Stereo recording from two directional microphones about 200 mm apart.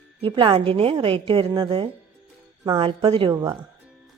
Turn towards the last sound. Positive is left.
turn(degrees=-20)  # may be behind; listen again after turning